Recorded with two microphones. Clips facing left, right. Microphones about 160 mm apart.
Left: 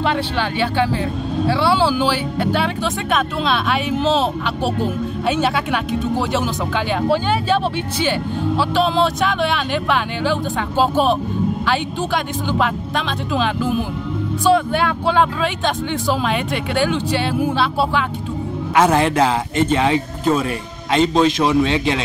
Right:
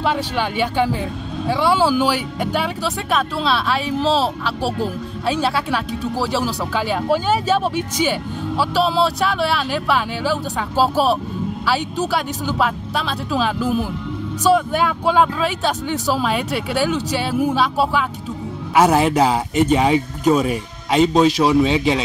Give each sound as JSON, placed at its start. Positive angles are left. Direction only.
{"t": 0.0, "sound": "speech", "side_deg": -10}
{"t": 12.5, "sound": "speech", "side_deg": -5}